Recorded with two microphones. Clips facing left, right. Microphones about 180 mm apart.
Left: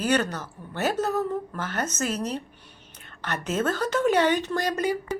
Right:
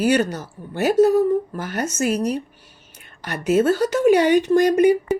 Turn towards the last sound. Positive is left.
turn(degrees=-15)  # may be behind; listen again after turning